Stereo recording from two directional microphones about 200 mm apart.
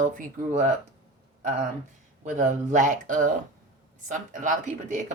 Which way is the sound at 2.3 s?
40° right (ahead or behind).